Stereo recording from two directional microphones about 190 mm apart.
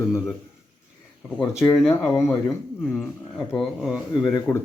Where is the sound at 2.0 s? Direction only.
15° left (ahead or behind); by 4.0 s centre (ahead or behind).